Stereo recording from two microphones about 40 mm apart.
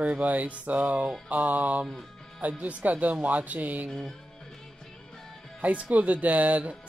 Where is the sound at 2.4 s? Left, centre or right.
Right.